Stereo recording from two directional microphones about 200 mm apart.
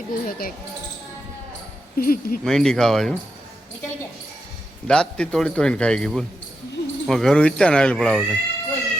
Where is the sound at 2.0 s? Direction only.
45° left (ahead or behind).